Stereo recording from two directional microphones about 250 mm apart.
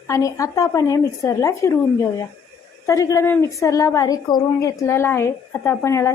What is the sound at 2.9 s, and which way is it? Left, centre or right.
A woman's voice, centre.